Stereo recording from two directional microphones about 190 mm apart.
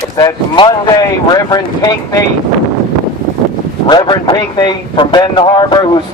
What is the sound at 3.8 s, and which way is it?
A man's voice, 25° left (ahead or behind).